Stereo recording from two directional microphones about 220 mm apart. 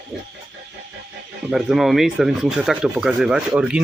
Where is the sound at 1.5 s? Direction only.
Centre (ahead or behind).